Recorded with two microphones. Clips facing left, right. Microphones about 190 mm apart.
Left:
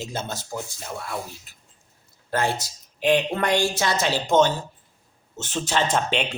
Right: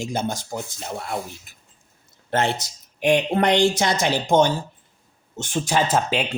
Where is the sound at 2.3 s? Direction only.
20° right (ahead or behind).